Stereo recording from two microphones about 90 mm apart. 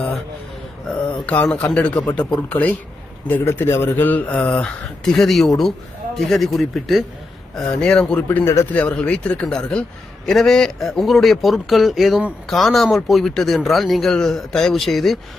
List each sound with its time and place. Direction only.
0.9 s a man's voice: 15° left (ahead or behind)